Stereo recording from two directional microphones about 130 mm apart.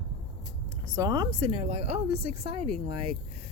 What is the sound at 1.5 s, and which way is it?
Speech, 50° right (ahead or behind).